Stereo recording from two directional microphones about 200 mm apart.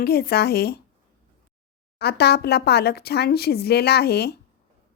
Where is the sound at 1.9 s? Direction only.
55° left (ahead or behind).